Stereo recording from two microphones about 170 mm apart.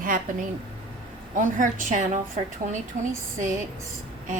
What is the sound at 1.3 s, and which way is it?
Speech, 50° right (ahead or behind).